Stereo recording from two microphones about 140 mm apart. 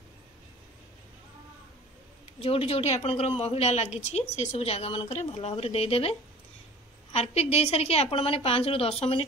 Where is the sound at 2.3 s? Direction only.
45° left (ahead or behind).